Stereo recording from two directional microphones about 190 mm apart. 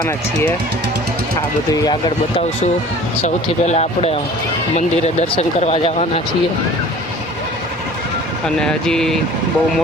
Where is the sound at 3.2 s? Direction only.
35° left (ahead or behind).